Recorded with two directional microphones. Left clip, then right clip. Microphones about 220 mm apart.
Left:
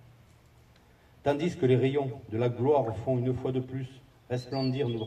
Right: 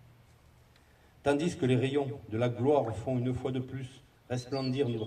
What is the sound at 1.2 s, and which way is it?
A man's voice, 50° right (ahead or behind).